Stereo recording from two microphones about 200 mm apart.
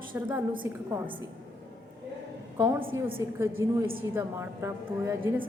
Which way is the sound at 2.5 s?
15° right (ahead or behind).